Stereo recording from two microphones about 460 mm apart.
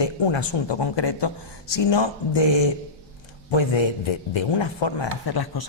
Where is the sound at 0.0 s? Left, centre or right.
Left.